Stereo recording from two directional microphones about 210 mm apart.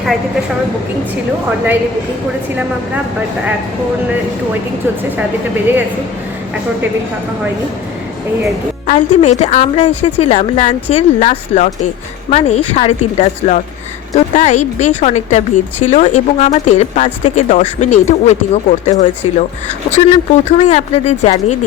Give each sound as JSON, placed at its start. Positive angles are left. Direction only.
{"t": 1.5, "sound": "a woman's voice", "side_deg": -10}
{"t": 8.9, "sound": "speech", "side_deg": 35}